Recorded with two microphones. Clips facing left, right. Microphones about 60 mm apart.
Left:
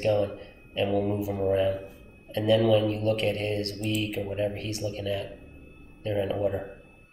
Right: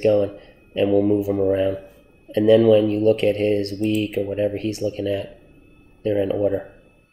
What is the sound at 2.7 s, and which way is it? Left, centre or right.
Speech, right.